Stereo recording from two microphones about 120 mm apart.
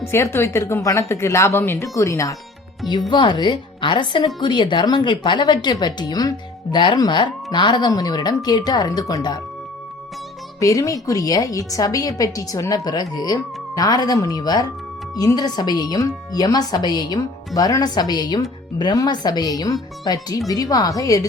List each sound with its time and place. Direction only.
0.0 s speech: 20° left (ahead or behind)
3.1 s a woman's voice: 40° left (ahead or behind)
10.6 s a woman's voice: 30° left (ahead or behind)